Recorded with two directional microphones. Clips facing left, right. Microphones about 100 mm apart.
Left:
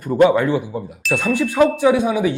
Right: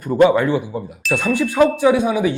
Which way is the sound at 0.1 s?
15° right (ahead or behind).